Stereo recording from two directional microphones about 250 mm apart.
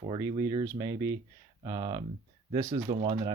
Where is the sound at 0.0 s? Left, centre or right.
Centre.